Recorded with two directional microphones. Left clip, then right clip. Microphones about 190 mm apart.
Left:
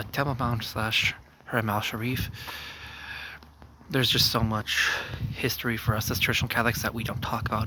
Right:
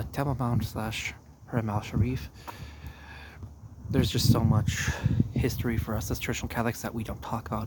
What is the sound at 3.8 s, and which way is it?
Speech, 5° right (ahead or behind).